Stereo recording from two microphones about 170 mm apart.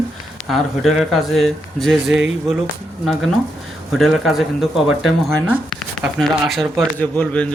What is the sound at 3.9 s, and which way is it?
A man's voice, centre (ahead or behind).